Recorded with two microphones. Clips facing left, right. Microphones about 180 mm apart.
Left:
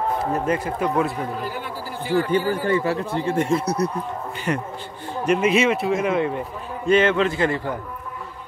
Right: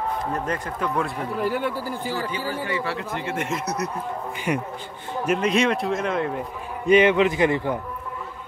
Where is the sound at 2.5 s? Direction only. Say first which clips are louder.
Left 6 dB; 50° left (ahead or behind); by 4.0 s 30° left (ahead or behind).